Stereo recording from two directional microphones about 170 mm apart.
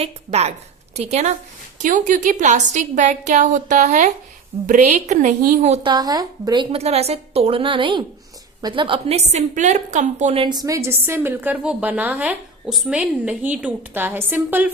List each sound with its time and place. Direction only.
0.0 s a woman's voice: 40° right (ahead or behind)
1.8 s a woman's voice: 50° right (ahead or behind)
5.8 s a woman's voice: 25° right (ahead or behind); by 10.4 s 45° right (ahead or behind)
10.4 s a woman's voice: 25° right (ahead or behind)